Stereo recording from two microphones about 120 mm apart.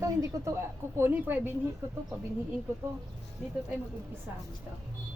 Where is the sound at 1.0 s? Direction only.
15° right (ahead or behind).